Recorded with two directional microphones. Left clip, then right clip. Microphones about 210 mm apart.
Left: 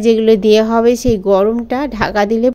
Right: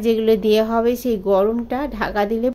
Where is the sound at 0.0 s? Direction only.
20° left (ahead or behind).